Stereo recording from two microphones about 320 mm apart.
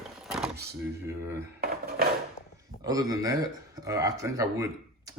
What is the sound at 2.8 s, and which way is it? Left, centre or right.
Speech, centre.